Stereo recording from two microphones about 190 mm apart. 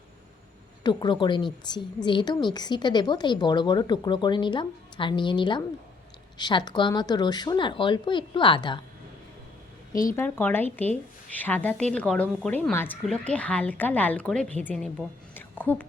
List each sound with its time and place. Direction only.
0.9 s a woman's voice: 25° left (ahead or behind)
9.9 s speech: 45° left (ahead or behind)
10.2 s a woman's voice: 10° left (ahead or behind)
15.4 s a sound: 10° left (ahead or behind)